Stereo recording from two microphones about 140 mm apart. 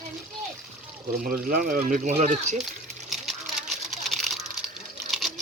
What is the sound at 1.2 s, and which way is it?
Speech, 70° right (ahead or behind).